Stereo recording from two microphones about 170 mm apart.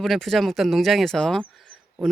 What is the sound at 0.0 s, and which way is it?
Speech, centre (ahead or behind).